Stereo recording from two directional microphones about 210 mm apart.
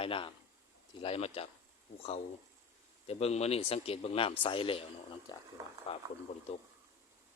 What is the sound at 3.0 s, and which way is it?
Speech, 30° left (ahead or behind).